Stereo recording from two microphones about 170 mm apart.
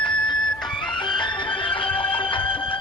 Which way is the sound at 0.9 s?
25° left (ahead or behind).